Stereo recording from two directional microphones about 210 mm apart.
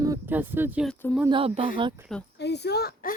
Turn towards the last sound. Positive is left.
turn(degrees=50)  # may be behind; listen again after turning